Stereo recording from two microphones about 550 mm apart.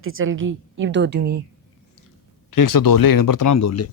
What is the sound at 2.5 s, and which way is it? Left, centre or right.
Speech, left.